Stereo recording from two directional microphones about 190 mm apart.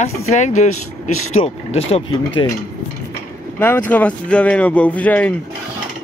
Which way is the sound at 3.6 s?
10° left (ahead or behind).